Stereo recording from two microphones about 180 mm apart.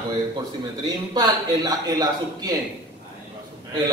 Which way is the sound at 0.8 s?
20° right (ahead or behind).